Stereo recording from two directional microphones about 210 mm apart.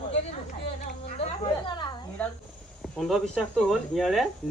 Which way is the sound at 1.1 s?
25° left (ahead or behind).